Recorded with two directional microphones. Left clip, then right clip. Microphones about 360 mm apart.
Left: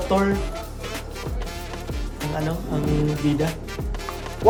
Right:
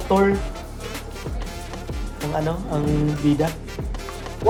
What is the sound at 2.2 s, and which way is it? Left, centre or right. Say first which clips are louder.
Speech: right 3 dB; centre.